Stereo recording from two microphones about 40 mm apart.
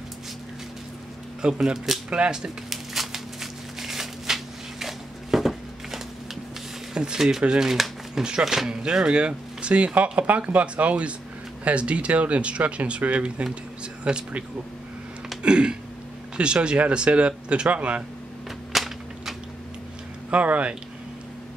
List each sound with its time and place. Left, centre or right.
1.4 s speech: centre
2.0 s speech: right
2.7 s a sound: centre
6.9 s speech: right
7.2 s speech: centre
7.4 s speech: right
7.7 s shuffling cards: centre
8.2 s speech: right
14.1 s speech: centre
15.4 s speech: right
18.7 s whip: centre
20.2 s speech: right